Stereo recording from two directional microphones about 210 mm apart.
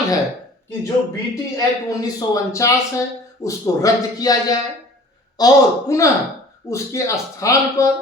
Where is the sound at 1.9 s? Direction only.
15° left (ahead or behind).